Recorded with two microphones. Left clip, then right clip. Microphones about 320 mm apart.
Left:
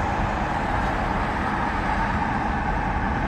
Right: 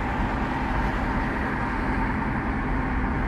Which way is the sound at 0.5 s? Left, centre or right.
Left.